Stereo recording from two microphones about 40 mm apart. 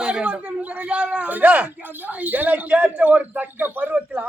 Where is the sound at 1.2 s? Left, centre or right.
Right.